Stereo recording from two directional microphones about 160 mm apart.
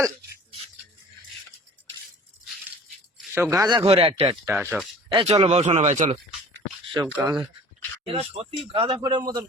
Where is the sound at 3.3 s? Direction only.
15° right (ahead or behind); by 4.3 s 35° right (ahead or behind).